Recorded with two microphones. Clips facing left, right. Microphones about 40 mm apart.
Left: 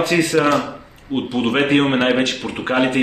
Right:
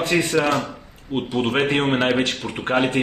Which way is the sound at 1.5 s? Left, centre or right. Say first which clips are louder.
Left 5 dB; centre.